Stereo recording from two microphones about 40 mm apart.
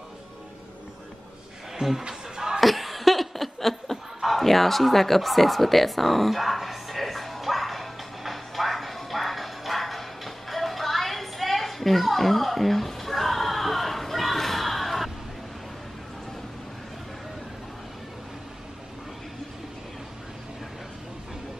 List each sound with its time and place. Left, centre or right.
1.8 s speech: centre
2.0 s a sound: centre
2.6 s laughter: centre